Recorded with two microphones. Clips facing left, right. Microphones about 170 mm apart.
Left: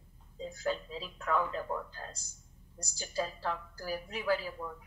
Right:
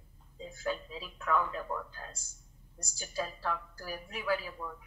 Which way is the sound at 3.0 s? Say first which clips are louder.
Left 1 dB; 40° left (ahead or behind).